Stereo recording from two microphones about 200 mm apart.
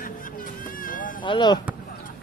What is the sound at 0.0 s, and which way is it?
Music, 45° left (ahead or behind).